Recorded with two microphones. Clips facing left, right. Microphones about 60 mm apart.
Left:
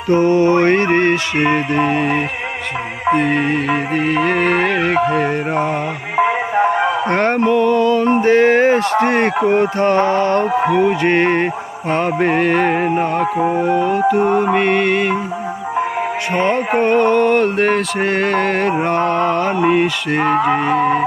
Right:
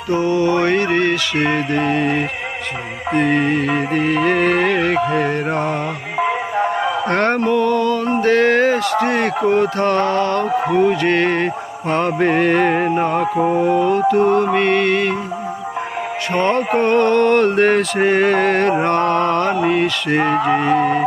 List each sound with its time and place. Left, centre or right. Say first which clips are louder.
0.1 s music: left 4 dB; left
1.7 s music: left 1 dB; centre
3.1 s mantra: left 1 dB; centre
5.0 s music: left 1 dB; centre
6.1 s music: left 4 dB; left
7.5 s music: left 3 dB; centre
7.8 s music: left 4 dB; left
8.2 s a sound: left 1 dB; centre
8.7 s a sound: left 3 dB; left
11.9 s mantra: even; centre
14.0 s music: even; centre
16.3 s mantra: even; centre
19.5 s music: left 2 dB; centre
20.1 s mantra: right 1 dB; centre